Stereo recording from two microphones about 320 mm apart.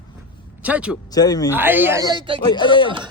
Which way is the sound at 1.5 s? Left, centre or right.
Centre.